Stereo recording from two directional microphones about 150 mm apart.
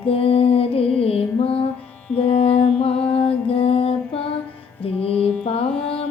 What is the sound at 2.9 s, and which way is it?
Mantra, 10° left (ahead or behind).